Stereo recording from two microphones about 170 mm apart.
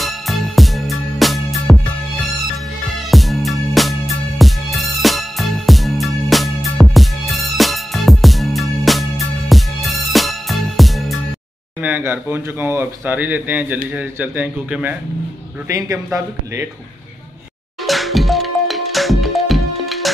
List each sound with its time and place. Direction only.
0.0 s music: centre (ahead or behind)
3.1 s music: centre (ahead or behind)
11.8 s speech: 10° right (ahead or behind)
17.8 s music: centre (ahead or behind)